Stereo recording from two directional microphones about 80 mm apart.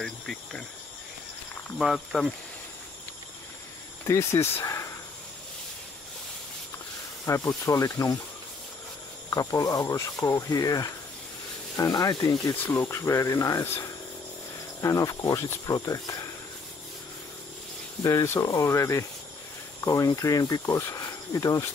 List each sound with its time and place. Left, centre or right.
0.0 s insect: centre
1.8 s speech: centre
4.0 s speech: left
7.2 s speech: left
9.3 s speech: left
12.6 s speech: left
14.8 s speech: left
18.0 s speech: left